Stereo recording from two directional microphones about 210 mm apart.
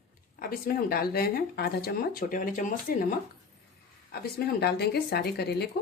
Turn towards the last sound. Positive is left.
turn(degrees=50)  # may be behind; listen again after turning